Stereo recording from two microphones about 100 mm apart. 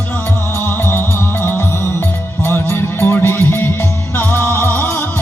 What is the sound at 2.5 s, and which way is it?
Music, 25° left (ahead or behind).